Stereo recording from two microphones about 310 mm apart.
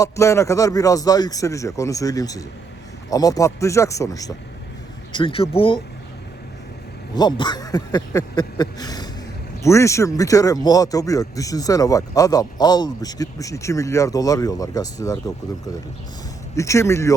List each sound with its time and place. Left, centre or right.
0.0 s speech: centre
7.2 s speech: centre
16.6 s speech: centre